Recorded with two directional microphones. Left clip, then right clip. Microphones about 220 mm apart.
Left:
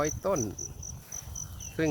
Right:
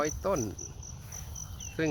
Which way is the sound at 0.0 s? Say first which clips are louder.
Left 1 dB; 5° left (ahead or behind).